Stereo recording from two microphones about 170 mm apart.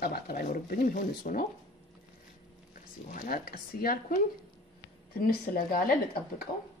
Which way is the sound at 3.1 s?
55° left (ahead or behind).